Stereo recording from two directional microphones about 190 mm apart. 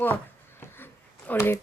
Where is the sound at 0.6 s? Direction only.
10° left (ahead or behind).